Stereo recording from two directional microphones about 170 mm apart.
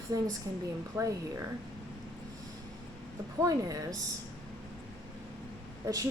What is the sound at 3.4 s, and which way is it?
Speech, 20° right (ahead or behind).